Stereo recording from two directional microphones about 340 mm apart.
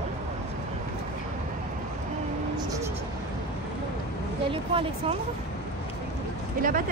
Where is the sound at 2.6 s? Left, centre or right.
Centre.